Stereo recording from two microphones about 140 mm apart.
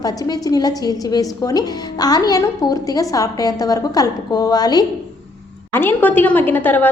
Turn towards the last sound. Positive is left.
turn(degrees=15)  # may be behind; listen again after turning